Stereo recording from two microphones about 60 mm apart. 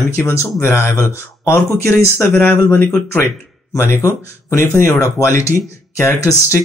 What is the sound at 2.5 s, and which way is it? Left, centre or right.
Speech, left.